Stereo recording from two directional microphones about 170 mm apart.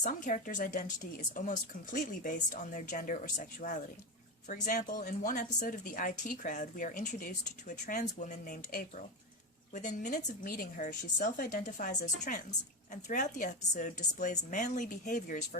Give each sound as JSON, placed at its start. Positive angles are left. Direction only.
{"t": 0.0, "sound": "a woman's voice", "side_deg": 50}